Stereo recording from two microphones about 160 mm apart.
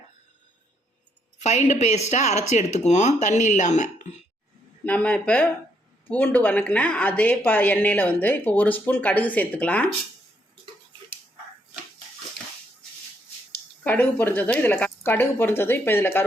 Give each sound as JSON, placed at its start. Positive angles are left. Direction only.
{"t": 1.4, "sound": "speech", "side_deg": 45}
{"t": 4.9, "sound": "speech", "side_deg": 10}
{"t": 13.8, "sound": "speech", "side_deg": 10}